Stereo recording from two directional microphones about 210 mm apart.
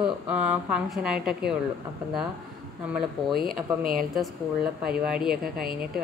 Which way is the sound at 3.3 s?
45° right (ahead or behind).